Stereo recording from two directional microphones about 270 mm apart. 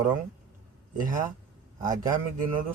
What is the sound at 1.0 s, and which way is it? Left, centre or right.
Speech, right.